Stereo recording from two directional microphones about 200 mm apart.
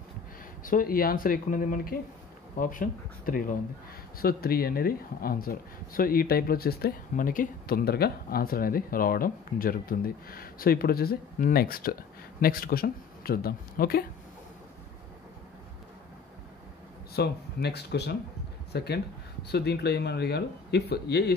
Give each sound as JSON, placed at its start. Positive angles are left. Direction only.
{"t": 0.7, "sound": "speech", "side_deg": 45}
{"t": 17.1, "sound": "speech", "side_deg": 55}